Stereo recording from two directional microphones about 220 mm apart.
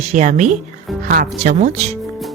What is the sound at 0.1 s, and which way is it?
Speech, 35° right (ahead or behind).